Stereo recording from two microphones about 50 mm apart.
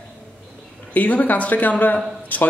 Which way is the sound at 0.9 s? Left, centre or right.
Left.